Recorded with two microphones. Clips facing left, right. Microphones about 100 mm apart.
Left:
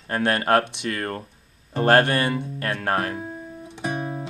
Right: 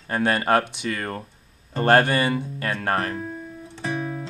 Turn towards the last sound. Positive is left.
turn(degrees=15)  # may be behind; listen again after turning